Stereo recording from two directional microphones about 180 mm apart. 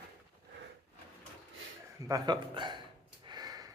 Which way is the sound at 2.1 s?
25° right (ahead or behind).